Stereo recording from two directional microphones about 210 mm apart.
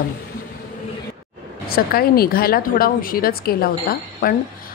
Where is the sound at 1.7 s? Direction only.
45° left (ahead or behind).